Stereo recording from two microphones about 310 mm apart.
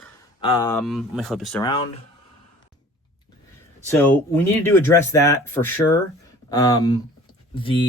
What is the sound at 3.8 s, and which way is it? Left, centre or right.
Speech, centre.